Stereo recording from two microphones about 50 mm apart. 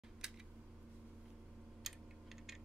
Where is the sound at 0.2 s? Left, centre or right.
Centre.